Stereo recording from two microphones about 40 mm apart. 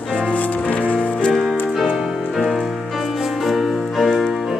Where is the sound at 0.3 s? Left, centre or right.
Left.